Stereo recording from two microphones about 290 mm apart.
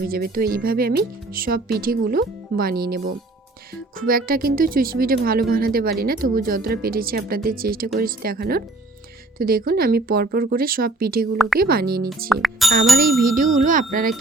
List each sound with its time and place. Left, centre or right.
0.1 s speech: right
11.3 s a woman's voice: centre
11.6 s speech: right
12.3 s speech: centre
13.0 s speech: right